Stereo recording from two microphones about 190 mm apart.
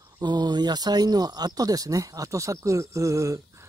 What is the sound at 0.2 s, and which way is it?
Speech, 20° right (ahead or behind).